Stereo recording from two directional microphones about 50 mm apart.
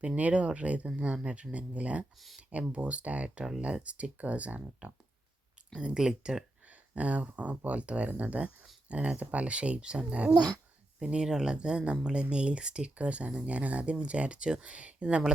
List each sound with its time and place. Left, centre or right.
0.2 s speech: right
2.1 s speech: centre
2.5 s speech: right
5.7 s speech: centre
6.7 s speech: right